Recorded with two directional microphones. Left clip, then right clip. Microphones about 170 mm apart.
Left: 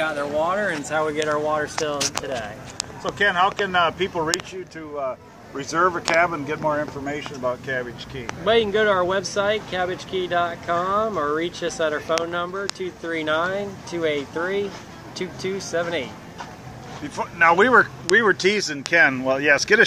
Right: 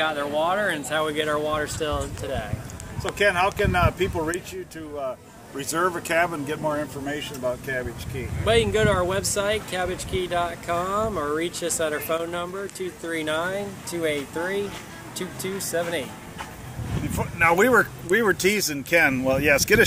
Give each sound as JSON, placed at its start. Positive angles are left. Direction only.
{"t": 0.0, "sound": "speech", "side_deg": 50}
{"t": 0.8, "sound": "speech", "side_deg": 20}
{"t": 3.2, "sound": "speech", "side_deg": -45}
{"t": 5.6, "sound": "speech", "side_deg": -15}
{"t": 8.5, "sound": "speech", "side_deg": -10}
{"t": 17.2, "sound": "speech", "side_deg": -55}